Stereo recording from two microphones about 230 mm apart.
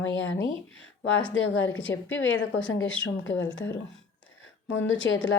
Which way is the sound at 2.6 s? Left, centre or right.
Centre.